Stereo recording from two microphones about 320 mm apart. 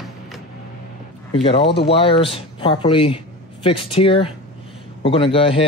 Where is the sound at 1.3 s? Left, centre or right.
Centre.